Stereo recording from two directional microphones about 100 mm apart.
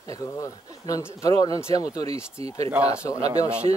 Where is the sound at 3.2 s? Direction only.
90° right.